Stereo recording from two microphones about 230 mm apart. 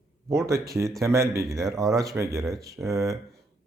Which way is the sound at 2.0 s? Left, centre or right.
Centre.